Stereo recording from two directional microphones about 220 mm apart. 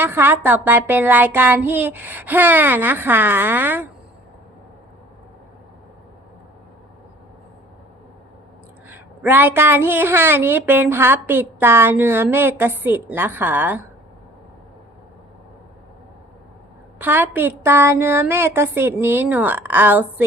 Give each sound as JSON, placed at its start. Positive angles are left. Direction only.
{"t": 0.0, "sound": "a woman's voice", "side_deg": -10}
{"t": 8.9, "sound": "a woman's voice", "side_deg": -10}
{"t": 17.0, "sound": "a woman's voice", "side_deg": -10}